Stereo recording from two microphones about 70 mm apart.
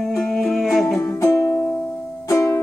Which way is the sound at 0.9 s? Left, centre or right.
Left.